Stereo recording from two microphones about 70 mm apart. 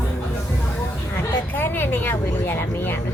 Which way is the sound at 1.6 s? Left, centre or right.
Left.